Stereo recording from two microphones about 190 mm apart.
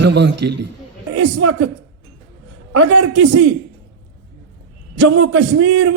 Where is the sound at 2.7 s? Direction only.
85° right.